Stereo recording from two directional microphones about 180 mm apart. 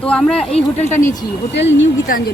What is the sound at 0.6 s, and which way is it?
Speech, 35° left (ahead or behind).